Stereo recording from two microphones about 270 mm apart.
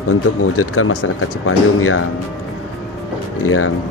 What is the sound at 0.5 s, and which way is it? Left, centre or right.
Speech, left.